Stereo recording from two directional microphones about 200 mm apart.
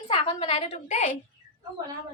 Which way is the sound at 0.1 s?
25° left (ahead or behind).